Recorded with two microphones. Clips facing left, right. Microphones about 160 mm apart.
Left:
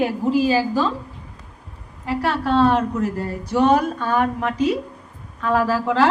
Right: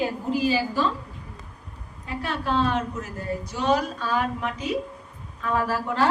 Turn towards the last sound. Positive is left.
turn(degrees=90)